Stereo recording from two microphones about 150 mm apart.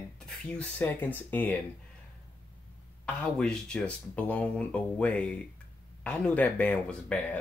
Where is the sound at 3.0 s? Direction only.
5° left (ahead or behind).